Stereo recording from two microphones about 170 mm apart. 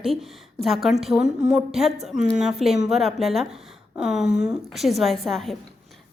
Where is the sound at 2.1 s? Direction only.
50° right (ahead or behind).